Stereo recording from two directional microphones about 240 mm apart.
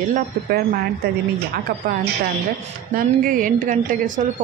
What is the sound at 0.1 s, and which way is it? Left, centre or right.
Speech, right.